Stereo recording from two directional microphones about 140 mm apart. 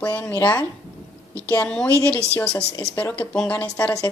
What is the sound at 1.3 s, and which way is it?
A woman's voice, 10° left (ahead or behind).